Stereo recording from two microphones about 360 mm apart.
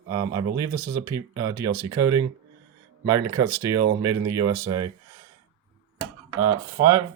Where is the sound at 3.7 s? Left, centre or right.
Right.